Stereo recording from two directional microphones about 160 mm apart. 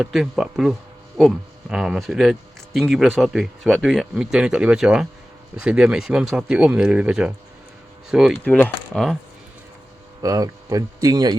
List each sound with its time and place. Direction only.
0.0 s speech: centre (ahead or behind)
8.4 s speech: 10° left (ahead or behind)
10.2 s speech: 20° right (ahead or behind)